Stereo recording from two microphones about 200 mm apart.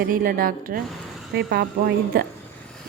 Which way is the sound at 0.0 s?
45° right (ahead or behind).